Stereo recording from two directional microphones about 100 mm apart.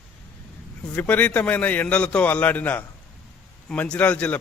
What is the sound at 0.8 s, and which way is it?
A man's voice, 15° left (ahead or behind).